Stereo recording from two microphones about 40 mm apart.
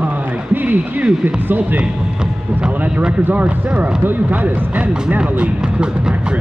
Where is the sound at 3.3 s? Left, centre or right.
Right.